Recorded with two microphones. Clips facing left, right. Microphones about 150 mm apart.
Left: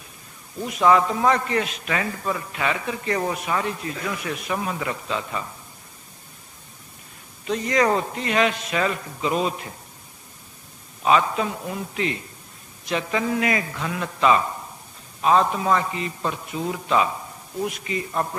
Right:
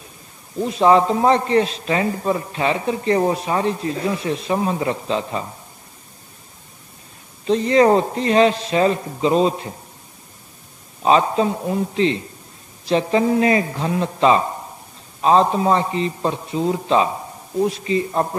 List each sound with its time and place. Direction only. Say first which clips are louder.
0.6 s a man's voice: right 4 dB; 30° right (ahead or behind)
7.4 s a man's voice: right 7 dB; 30° right (ahead or behind)
11.0 s a man's voice: right 4 dB; 30° right (ahead or behind)